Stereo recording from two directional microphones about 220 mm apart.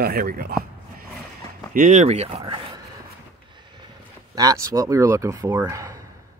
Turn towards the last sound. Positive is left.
turn(degrees=-15)  # may be behind; listen again after turning